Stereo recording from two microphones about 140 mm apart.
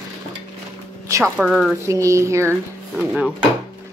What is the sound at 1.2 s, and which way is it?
Speech, 5° right (ahead or behind).